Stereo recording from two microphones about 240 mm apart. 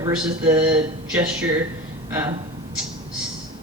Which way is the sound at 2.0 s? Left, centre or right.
Centre.